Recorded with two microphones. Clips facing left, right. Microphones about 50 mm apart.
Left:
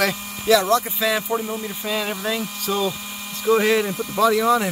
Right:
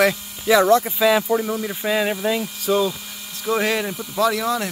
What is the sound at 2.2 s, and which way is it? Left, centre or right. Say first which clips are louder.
Speech: right 3 dB; centre.